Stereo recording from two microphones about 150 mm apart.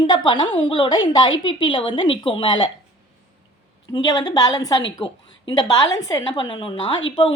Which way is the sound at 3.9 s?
25° left (ahead or behind).